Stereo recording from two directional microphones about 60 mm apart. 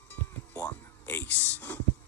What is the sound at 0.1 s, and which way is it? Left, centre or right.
Music, left.